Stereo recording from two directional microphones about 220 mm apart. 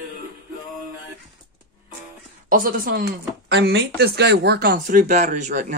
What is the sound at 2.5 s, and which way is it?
Speech, 40° right (ahead or behind).